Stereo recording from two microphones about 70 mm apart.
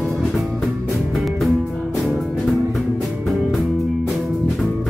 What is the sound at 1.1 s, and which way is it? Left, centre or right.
Music, centre.